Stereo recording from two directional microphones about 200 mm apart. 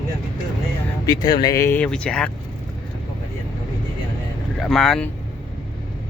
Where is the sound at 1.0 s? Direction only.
20° left (ahead or behind); by 2.3 s 5° left (ahead or behind).